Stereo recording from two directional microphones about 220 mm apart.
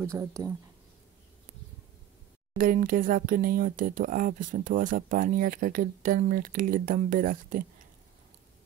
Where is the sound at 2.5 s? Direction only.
40° right (ahead or behind).